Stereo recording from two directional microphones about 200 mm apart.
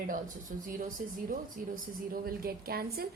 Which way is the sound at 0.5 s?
40° right (ahead or behind).